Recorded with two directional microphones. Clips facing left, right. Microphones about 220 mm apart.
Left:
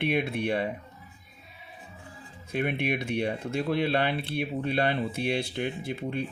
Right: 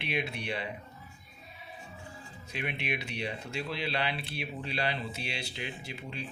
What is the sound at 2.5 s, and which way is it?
Speech, 50° left (ahead or behind).